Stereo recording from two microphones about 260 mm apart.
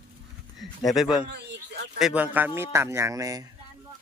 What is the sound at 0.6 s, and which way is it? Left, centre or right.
A man's voice, centre.